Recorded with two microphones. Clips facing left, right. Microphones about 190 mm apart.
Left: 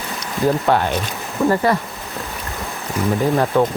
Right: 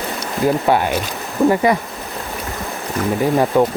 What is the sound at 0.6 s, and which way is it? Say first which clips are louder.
Speech: right 1 dB; 10° right (ahead or behind).